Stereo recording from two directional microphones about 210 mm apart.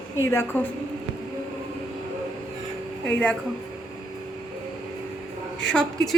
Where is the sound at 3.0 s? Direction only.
5° left (ahead or behind).